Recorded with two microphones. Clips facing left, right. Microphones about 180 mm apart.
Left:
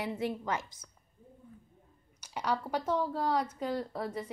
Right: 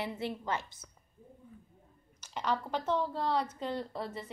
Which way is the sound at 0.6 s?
90° left.